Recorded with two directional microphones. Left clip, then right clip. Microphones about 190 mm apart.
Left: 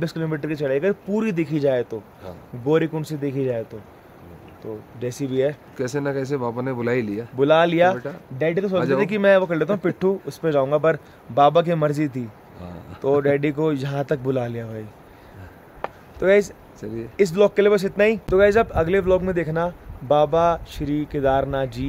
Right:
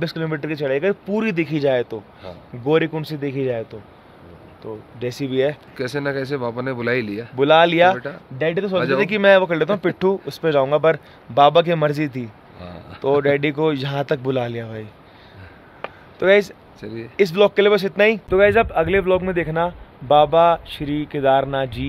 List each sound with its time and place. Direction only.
0.0 s speech: 5° left (ahead or behind)
5.0 s speech: 5° right (ahead or behind)
5.8 s speech: 20° left (ahead or behind)
7.3 s speech: centre (ahead or behind)
16.2 s speech: centre (ahead or behind)
16.8 s speech: 25° left (ahead or behind)
17.2 s speech: centre (ahead or behind)